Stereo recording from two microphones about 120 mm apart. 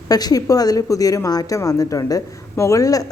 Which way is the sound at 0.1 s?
30° left (ahead or behind).